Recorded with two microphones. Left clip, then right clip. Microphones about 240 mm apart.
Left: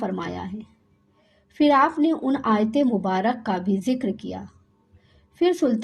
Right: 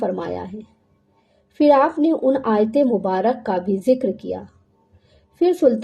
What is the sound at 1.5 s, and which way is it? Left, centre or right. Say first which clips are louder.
A woman's voice: right 4 dB; left.